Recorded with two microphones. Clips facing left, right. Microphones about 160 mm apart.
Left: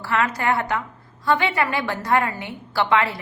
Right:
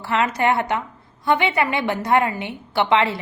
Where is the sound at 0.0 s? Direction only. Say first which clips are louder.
Right 2 dB; 20° right (ahead or behind).